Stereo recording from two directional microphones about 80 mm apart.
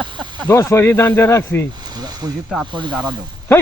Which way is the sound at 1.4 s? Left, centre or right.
Centre.